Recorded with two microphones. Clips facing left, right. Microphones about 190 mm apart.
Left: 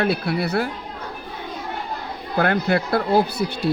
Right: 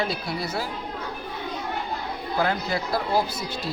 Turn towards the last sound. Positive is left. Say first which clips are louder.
# left 8 dB
turn(degrees=65)  # may be behind; listen again after turning